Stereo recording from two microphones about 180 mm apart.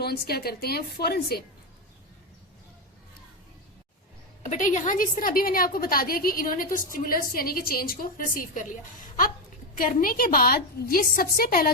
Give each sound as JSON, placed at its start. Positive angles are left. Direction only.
{"t": 0.0, "sound": "a woman's voice", "side_deg": 60}
{"t": 4.4, "sound": "a woman's voice", "side_deg": 45}
{"t": 9.7, "sound": "a woman's voice", "side_deg": 50}